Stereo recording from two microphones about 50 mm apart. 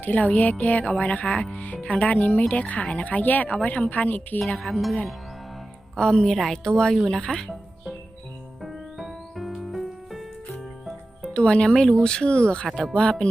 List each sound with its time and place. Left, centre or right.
0.0 s speech: left
1.5 s speech: left
4.6 s speech: centre
6.0 s speech: centre
8.6 s music: centre
11.3 s speech: centre